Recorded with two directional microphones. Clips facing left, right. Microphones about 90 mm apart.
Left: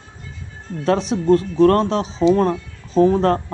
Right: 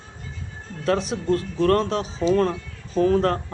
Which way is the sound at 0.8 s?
25° left (ahead or behind).